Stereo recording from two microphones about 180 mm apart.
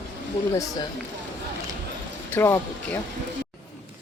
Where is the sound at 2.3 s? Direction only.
15° left (ahead or behind).